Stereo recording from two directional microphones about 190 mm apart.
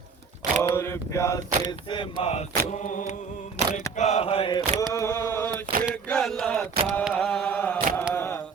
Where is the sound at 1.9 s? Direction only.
30° left (ahead or behind).